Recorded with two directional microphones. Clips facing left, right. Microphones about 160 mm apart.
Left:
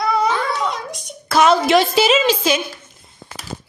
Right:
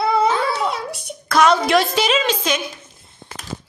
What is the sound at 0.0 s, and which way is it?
Child singing, 25° right (ahead or behind).